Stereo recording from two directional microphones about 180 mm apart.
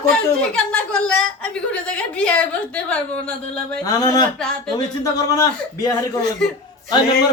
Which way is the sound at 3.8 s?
20° left (ahead or behind).